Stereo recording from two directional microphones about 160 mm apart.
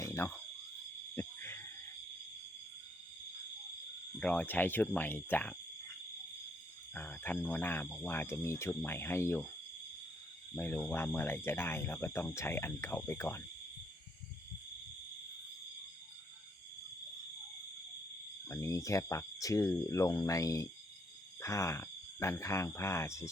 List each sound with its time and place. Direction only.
0.0 s cricket: 15° left (ahead or behind)
1.1 s owl: 15° left (ahead or behind)
4.2 s speech: 5° left (ahead or behind)
6.9 s speech: 10° left (ahead or behind)
10.5 s speech: 10° left (ahead or behind)
18.4 s speech: 20° left (ahead or behind)